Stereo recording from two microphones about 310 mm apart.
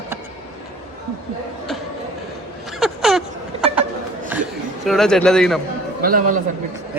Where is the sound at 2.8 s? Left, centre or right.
Centre.